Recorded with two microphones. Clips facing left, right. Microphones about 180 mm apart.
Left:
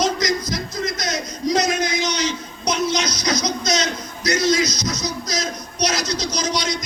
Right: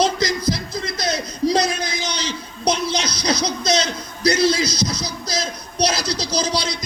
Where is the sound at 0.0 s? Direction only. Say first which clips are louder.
Right 2 dB; 30° right (ahead or behind).